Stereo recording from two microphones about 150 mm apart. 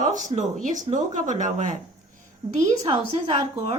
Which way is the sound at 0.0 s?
55° right (ahead or behind).